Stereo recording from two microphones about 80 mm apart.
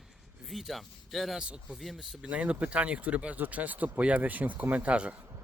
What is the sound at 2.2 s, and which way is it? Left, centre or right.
Speech, centre.